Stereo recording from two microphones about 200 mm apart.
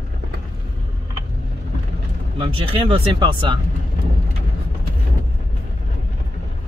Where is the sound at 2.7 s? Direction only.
25° right (ahead or behind).